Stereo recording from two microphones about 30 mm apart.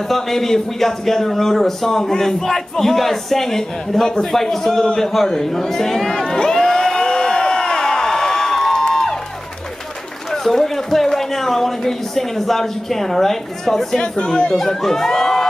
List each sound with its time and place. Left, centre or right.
0.1 s speech: centre
6.2 s crowd: left
8.8 s music: centre
10.3 s speech: centre
14.0 s speech: left
14.5 s speech: centre